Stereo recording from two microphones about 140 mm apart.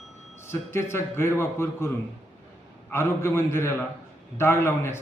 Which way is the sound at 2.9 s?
15° left (ahead or behind).